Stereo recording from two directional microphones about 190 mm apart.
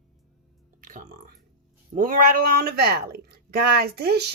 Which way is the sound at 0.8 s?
45° right (ahead or behind).